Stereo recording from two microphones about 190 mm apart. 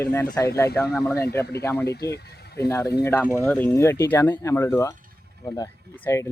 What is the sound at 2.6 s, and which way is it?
Speech, 15° left (ahead or behind).